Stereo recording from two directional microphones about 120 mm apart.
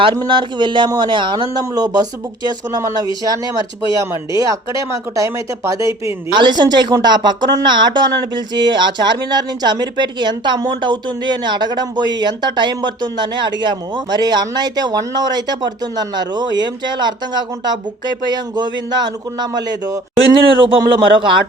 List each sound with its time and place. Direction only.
0.3 s speech: 40° right (ahead or behind)
20.6 s a man's voice: 45° right (ahead or behind)